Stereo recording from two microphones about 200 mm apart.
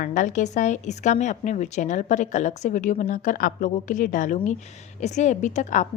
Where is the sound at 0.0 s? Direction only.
40° left (ahead or behind).